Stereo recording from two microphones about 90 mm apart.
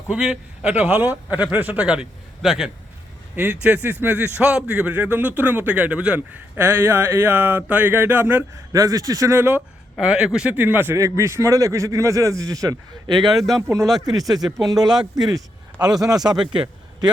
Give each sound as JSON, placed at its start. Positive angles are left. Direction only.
{"t": 0.1, "sound": "a man's voice", "side_deg": -10}
{"t": 3.3, "sound": "speech", "side_deg": -15}
{"t": 8.7, "sound": "a man's voice", "side_deg": -40}
{"t": 10.0, "sound": "a man's voice", "side_deg": -10}
{"t": 10.9, "sound": "a man's voice", "side_deg": -35}
{"t": 13.2, "sound": "speech", "side_deg": 0}
{"t": 13.6, "sound": "a man's voice", "side_deg": -35}
{"t": 14.2, "sound": "speech", "side_deg": 0}
{"t": 15.3, "sound": "speech", "side_deg": -45}
{"t": 16.5, "sound": "a sound", "side_deg": -60}